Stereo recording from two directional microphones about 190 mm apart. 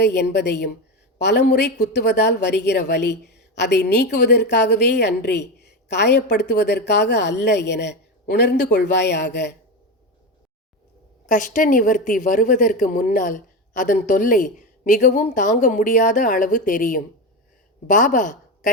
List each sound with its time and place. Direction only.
0.0 s a woman's voice: 60° left (ahead or behind)
11.3 s a woman's voice: 45° left (ahead or behind)